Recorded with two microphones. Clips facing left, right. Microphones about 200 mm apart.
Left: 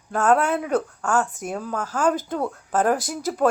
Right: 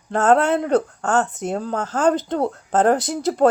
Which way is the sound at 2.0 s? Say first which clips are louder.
Right 4 dB; 70° right (ahead or behind).